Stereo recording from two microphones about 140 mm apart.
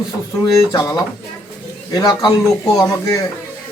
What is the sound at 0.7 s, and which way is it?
Speech, 30° left (ahead or behind).